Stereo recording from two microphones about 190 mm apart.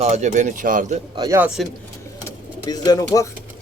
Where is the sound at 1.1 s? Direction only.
20° right (ahead or behind).